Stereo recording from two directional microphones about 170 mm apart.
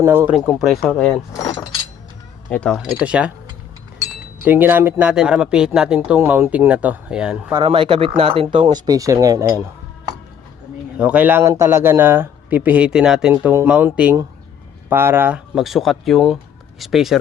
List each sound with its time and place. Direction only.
0.0 s speech: 15° right (ahead or behind)
0.3 s speech: centre (ahead or behind)
1.3 s speech: 20° left (ahead or behind)
2.5 s speech: 5° left (ahead or behind)
4.4 s speech: 10° right (ahead or behind)
7.5 s speech: 30° right (ahead or behind)
8.7 s speech: 20° right (ahead or behind)
10.9 s speech: 5° right (ahead or behind)
13.3 s speech: 15° right (ahead or behind)
15.5 s speech: centre (ahead or behind)